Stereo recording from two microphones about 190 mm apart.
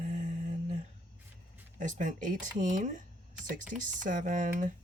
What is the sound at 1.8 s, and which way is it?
Speech, 40° right (ahead or behind).